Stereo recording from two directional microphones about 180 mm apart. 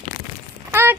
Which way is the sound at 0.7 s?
10° right (ahead or behind).